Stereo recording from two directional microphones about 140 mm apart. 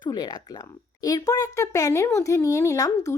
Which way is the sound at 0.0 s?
30° left (ahead or behind).